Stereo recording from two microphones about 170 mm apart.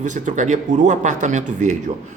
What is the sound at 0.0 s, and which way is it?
Speech, 45° right (ahead or behind).